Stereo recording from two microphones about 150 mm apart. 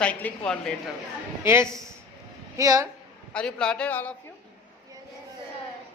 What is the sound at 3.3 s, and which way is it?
Speech, 5° left (ahead or behind).